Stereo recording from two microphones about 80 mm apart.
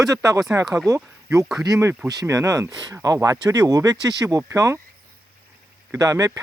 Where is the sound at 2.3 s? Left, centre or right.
Right.